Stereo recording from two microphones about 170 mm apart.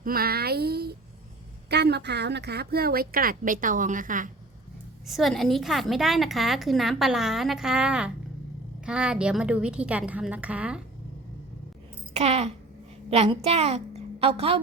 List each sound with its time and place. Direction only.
0.0 s a woman's voice: 60° right (ahead or behind)
5.0 s a woman's voice: centre (ahead or behind)
12.1 s a sound: 35° right (ahead or behind)
13.1 s a woman's voice: 35° right (ahead or behind)